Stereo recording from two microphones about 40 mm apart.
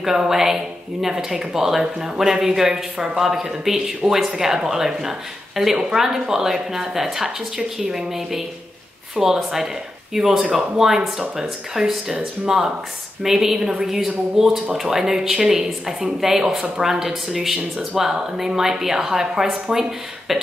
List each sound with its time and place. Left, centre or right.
0.0 s speech: centre
11.0 s speech: right
11.8 s speech: centre